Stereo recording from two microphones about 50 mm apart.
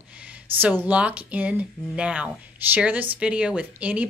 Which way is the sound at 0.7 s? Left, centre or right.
Right.